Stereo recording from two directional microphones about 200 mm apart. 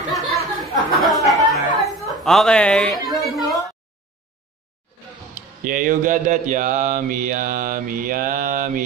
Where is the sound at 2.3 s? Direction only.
5° left (ahead or behind).